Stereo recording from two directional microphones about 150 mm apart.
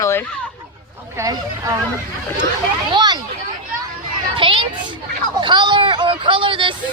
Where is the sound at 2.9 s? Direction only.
30° right (ahead or behind).